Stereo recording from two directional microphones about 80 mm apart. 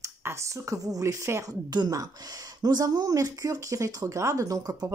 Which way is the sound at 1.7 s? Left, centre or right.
Right.